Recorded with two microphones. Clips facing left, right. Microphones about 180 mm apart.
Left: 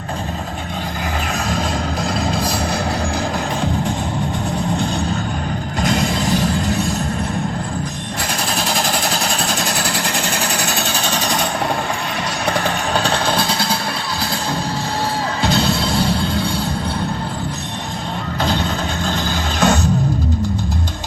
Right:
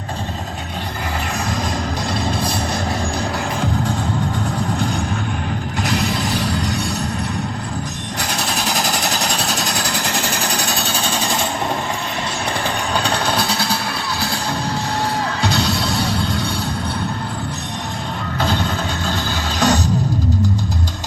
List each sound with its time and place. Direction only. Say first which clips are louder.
5.8 s a sound: left 3 dB; 45° left (ahead or behind)
8.7 s jackhammer: left 1 dB; 45° right (ahead or behind)
9.4 s vehicle: left 1 dB; 50° left (ahead or behind)
10.2 s jackhammer: left 1 dB; 55° left (ahead or behind)
10.8 s sewing machine: left 1 dB; 60° left (ahead or behind)
19.5 s music: left 1 dB; 40° right (ahead or behind)